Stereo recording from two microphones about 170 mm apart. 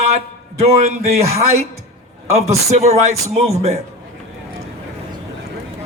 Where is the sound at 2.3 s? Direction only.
40° right (ahead or behind).